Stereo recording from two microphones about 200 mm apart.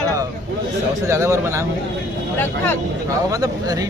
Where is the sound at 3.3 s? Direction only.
20° right (ahead or behind).